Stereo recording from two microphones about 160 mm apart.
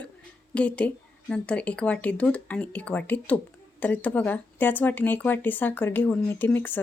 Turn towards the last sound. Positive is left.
turn(degrees=10)  # may be behind; listen again after turning